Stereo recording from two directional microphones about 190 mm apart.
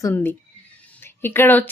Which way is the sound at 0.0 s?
10° left (ahead or behind).